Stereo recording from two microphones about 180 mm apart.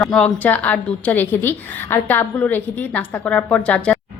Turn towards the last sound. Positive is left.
turn(degrees=5)  # may be behind; listen again after turning